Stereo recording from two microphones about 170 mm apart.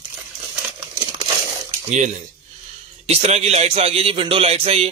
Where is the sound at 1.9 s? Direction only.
45° right (ahead or behind).